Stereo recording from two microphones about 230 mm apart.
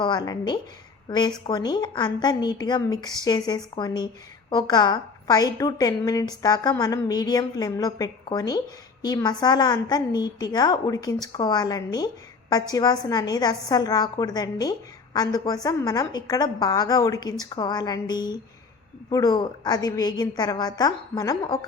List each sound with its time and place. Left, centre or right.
0.0 s a woman's voice: centre